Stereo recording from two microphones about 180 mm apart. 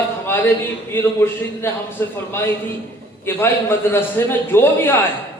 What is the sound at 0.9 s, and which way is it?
A man's voice, 10° left (ahead or behind).